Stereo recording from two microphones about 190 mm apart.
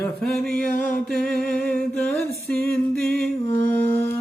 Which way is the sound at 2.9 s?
55° right (ahead or behind).